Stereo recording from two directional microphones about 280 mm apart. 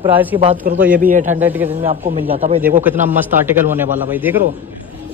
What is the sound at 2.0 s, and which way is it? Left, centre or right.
Speech, right.